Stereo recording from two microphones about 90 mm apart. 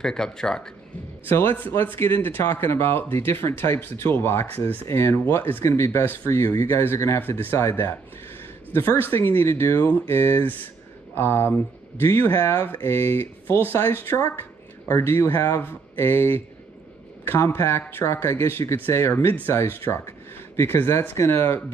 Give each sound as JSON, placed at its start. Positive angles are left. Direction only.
{"t": 0.0, "sound": "speech", "side_deg": 5}
{"t": 1.2, "sound": "speech", "side_deg": 25}